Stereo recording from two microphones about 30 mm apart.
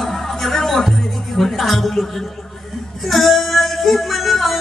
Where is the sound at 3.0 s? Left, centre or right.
Centre.